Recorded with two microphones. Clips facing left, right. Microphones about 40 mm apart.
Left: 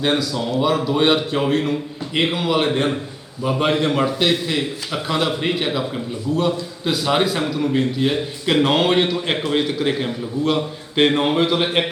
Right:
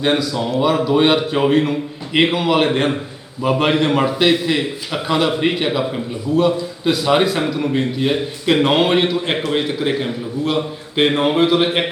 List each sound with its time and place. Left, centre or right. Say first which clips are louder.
0.0 s a man's voice: right 2 dB; centre
2.6 s a man's voice: right 2 dB; right
3.6 s a man's voice: right 1 dB; centre